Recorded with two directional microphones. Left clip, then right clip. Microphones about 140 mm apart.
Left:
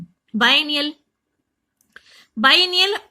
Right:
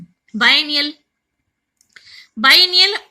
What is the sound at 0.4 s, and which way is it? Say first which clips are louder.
Speech: right 3 dB; 30° left (ahead or behind).